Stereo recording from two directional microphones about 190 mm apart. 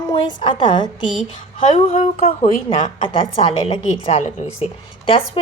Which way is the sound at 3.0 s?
25° left (ahead or behind).